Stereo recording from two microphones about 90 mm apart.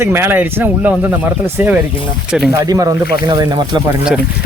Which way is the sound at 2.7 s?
45° right (ahead or behind).